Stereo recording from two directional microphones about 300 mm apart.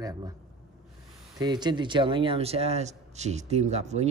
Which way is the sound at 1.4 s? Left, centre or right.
Centre.